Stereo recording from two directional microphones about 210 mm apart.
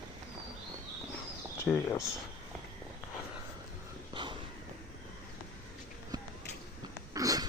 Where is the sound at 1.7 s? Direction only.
5° left (ahead or behind).